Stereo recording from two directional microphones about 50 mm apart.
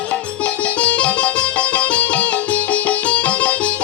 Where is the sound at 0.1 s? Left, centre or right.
Left.